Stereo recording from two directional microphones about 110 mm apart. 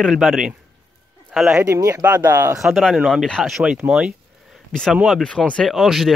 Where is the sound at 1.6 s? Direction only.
30° right (ahead or behind).